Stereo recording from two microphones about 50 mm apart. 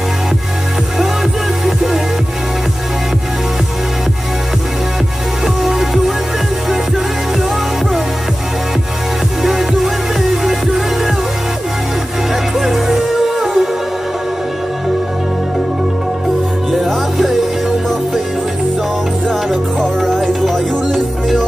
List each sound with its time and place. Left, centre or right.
5.6 s music: centre
9.4 s music: centre
12.5 s music: centre
16.8 s music: centre
19.8 s music: centre